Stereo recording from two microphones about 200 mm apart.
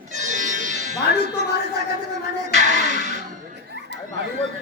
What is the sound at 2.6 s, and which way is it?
Music, 40° right (ahead or behind).